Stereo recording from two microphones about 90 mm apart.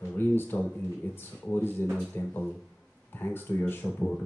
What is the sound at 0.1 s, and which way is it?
Speech, 25° left (ahead or behind).